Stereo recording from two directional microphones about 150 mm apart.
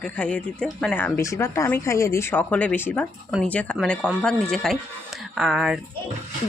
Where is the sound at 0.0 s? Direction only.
5° left (ahead or behind).